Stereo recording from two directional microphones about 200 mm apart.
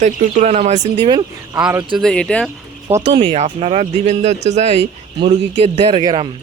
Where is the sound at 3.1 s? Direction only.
30° right (ahead or behind).